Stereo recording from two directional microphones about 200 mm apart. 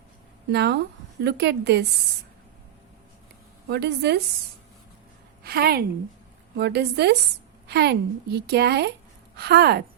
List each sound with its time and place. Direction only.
0.5 s a woman's voice: 55° right (ahead or behind)
3.7 s a woman's voice: 55° right (ahead or behind)
5.4 s a woman's voice: 50° right (ahead or behind)